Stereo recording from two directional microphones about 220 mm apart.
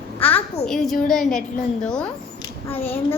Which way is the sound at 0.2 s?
5° left (ahead or behind).